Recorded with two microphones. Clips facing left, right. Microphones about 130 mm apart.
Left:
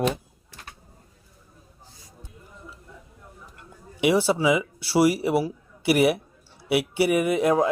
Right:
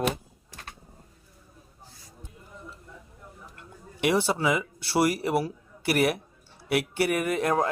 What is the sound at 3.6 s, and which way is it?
Speech, 5° left (ahead or behind).